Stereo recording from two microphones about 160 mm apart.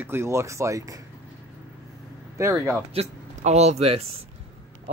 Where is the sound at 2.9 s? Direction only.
45° right (ahead or behind).